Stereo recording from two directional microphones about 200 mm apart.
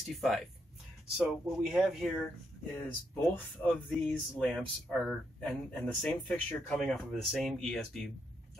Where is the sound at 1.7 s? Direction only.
Centre (ahead or behind).